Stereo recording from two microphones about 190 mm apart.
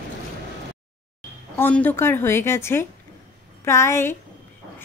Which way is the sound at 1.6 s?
10° left (ahead or behind).